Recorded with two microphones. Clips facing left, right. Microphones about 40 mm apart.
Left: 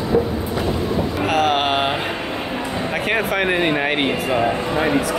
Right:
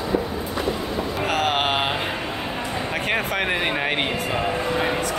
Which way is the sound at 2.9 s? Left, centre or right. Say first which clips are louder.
Left 4 dB; centre.